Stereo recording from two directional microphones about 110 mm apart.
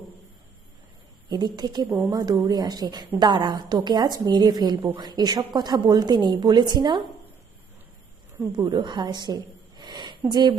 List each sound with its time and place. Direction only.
1.3 s a woman's voice: 40° right (ahead or behind)
8.5 s a woman's voice: 45° right (ahead or behind)